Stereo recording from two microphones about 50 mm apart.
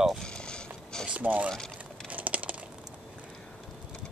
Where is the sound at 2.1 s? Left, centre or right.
Right.